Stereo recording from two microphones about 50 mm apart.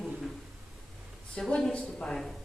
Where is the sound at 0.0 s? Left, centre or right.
Centre.